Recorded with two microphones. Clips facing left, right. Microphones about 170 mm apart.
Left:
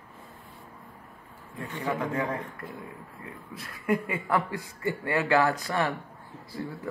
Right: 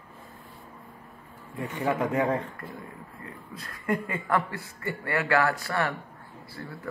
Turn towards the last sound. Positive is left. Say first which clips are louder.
# left 4 dB
turn(degrees=20)  # may be behind; listen again after turning